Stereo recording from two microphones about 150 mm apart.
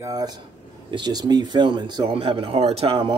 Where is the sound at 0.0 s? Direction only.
25° right (ahead or behind).